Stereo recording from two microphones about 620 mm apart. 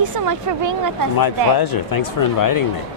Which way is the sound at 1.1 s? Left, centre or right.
Left.